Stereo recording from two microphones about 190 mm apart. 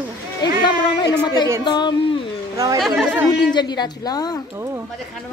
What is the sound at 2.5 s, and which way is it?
Speech, 20° right (ahead or behind).